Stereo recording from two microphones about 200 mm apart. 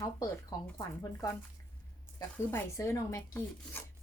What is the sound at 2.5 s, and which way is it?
Speech, 15° left (ahead or behind).